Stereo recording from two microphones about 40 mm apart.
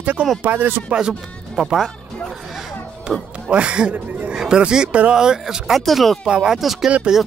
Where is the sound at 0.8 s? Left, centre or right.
Right.